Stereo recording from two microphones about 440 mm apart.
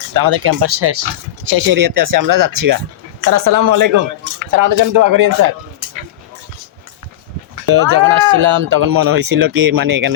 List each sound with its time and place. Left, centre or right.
0.1 s speech: right
1.5 s speech: right
7.7 s speech: right